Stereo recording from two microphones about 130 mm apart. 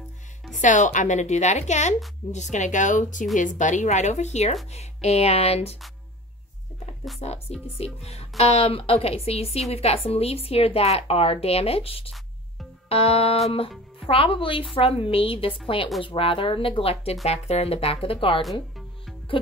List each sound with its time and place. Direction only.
0.6 s a woman's voice: 70° left (ahead or behind); by 5.8 s 50° left (ahead or behind)
7.2 s a woman's voice: 55° left (ahead or behind)
18.4 s music: centre (ahead or behind)